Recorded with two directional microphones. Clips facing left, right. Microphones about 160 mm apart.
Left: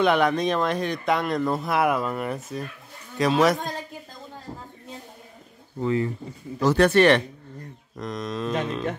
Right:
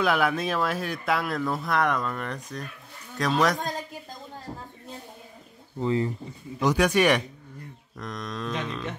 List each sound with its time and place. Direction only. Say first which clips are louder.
0.0 s speech: left 4 dB; 5° right (ahead or behind)
6.6 s speech: left 4 dB; 10° right (ahead or behind)
8.0 s speech: left 5 dB; centre (ahead or behind)
8.5 s music: left 7 dB; 45° left (ahead or behind)